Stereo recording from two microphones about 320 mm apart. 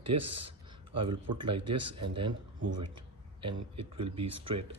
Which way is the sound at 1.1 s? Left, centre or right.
Right.